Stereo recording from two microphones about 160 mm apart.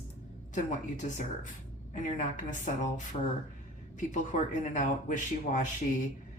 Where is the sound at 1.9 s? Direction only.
50° left (ahead or behind).